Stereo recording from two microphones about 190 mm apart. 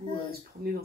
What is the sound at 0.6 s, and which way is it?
Speech, 55° right (ahead or behind).